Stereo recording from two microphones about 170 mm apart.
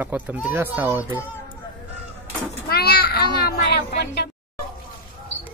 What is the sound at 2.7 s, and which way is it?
A child's voice, 65° left (ahead or behind).